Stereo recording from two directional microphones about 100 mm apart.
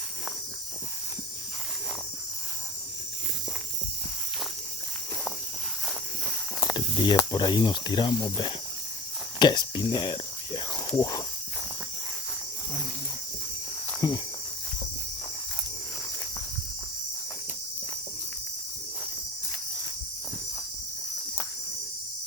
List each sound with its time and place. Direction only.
6.7 s snake: 50° left (ahead or behind)
7.3 s speech: 50° left (ahead or behind)
14.0 s speech: 40° left (ahead or behind)